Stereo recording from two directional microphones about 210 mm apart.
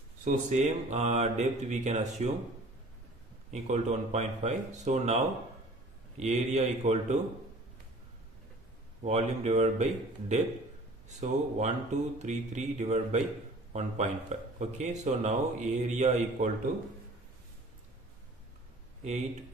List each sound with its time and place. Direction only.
0.2 s a man's voice: 35° right (ahead or behind)
3.5 s a man's voice: 35° right (ahead or behind)
9.0 s a man's voice: 30° right (ahead or behind)